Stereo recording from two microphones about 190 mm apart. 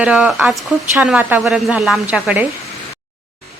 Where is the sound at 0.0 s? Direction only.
5° right (ahead or behind).